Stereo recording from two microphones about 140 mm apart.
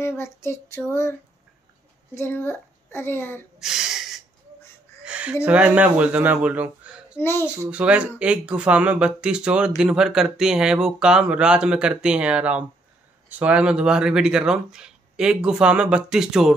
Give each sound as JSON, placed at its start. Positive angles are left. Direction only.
{"t": 0.0, "sound": "child singing", "side_deg": 20}
{"t": 2.1, "sound": "a woman's voice", "side_deg": 15}
{"t": 3.5, "sound": "a sound", "side_deg": -5}
{"t": 5.0, "sound": "speech", "side_deg": -10}
{"t": 7.2, "sound": "a woman's voice", "side_deg": 15}
{"t": 7.4, "sound": "speech", "side_deg": -10}